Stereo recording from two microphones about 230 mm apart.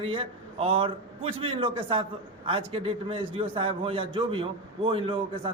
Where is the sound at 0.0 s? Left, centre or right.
Right.